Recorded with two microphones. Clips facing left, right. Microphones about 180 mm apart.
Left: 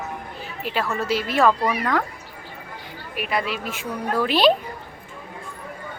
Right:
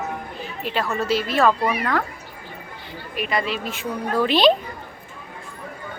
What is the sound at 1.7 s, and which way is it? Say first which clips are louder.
Speech: even; 5° right (ahead or behind).